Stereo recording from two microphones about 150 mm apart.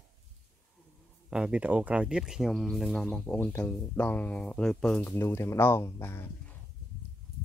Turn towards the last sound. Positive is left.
turn(degrees=15)  # may be behind; listen again after turning